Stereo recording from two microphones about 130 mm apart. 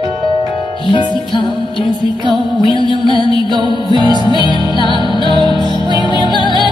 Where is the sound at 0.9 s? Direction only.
35° left (ahead or behind).